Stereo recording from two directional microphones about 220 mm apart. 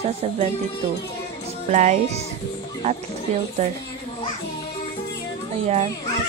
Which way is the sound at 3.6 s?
30° right (ahead or behind).